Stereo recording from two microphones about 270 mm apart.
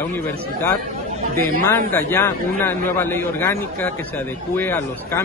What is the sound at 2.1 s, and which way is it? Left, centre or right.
A man's voice, centre.